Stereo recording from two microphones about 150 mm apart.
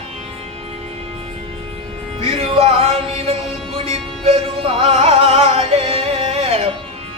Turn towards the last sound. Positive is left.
turn(degrees=-40)  # may be behind; listen again after turning